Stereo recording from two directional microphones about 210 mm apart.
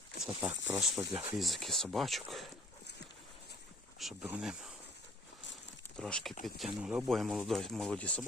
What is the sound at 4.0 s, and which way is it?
Speech, 5° right (ahead or behind).